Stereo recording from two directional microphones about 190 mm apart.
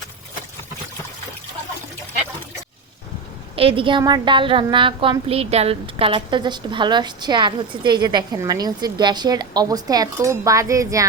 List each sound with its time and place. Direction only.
3.5 s a woman's voice: 30° right (ahead or behind)